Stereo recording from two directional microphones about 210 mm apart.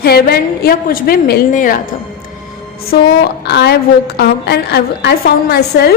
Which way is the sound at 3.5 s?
55° left (ahead or behind).